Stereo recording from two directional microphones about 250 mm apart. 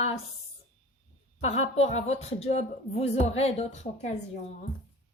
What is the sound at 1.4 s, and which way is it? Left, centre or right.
Speech, left.